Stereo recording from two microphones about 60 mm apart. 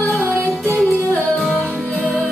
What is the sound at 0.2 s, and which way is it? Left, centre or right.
Music, right.